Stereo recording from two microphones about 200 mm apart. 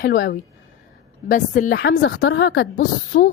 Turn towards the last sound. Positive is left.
turn(degrees=45)  # may be behind; listen again after turning